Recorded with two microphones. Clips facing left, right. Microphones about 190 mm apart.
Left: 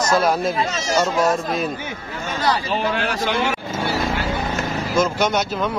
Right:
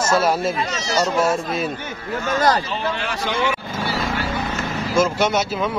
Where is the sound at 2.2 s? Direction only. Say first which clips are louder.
Right 3 dB; 45° right (ahead or behind).